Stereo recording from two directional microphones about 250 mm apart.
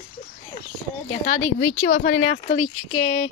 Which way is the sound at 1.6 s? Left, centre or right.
Left.